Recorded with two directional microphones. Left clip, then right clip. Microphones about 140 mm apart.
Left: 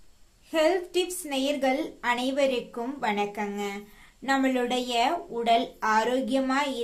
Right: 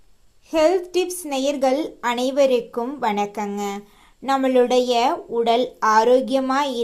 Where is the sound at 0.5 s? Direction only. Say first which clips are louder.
Right 6 dB; 35° right (ahead or behind).